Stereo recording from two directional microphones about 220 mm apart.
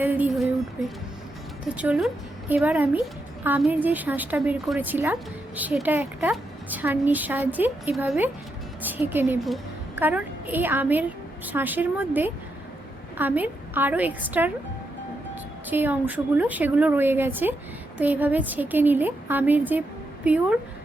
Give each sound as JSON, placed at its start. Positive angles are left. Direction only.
{"t": 0.0, "sound": "a woman's voice", "side_deg": -10}
{"t": 1.6, "sound": "a woman's voice", "side_deg": -5}
{"t": 15.7, "sound": "a woman's voice", "side_deg": -10}